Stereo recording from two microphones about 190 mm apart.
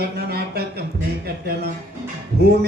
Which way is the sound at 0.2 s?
60° right (ahead or behind).